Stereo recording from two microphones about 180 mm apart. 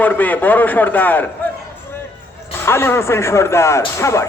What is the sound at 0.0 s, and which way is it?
Speech, 10° left (ahead or behind).